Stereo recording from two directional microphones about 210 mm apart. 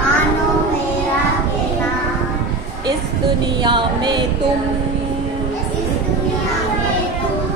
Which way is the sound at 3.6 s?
20° right (ahead or behind).